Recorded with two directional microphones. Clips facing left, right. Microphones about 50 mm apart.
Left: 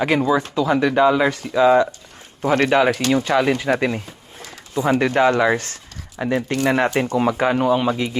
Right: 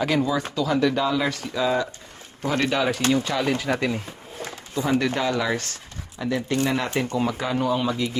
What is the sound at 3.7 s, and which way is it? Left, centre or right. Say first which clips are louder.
Speech: left 4 dB; left.